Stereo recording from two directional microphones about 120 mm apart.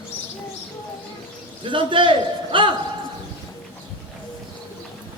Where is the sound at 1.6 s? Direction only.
45° right (ahead or behind).